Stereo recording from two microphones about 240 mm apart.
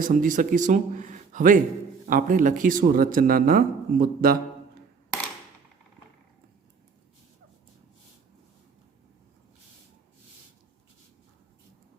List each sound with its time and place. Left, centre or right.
0.0 s speech: right